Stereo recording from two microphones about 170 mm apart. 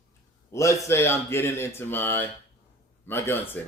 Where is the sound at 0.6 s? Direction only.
15° left (ahead or behind).